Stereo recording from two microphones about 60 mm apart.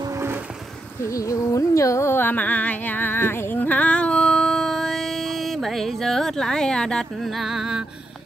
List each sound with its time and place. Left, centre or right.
1.1 s carnatic music: left
2.1 s music: left; by 7.1 s centre
7.2 s music: centre